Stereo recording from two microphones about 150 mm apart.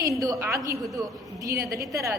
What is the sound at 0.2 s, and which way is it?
A woman's voice, 20° right (ahead or behind).